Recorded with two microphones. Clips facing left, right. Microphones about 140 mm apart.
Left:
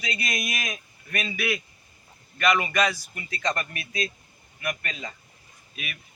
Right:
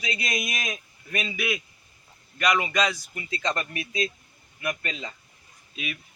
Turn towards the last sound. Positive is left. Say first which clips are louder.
# right 4 dB
turn(degrees=-20)  # may be behind; listen again after turning